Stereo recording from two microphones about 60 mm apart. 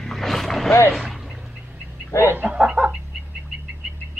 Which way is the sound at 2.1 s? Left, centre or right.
Left.